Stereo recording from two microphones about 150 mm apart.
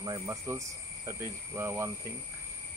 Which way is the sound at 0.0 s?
25° right (ahead or behind).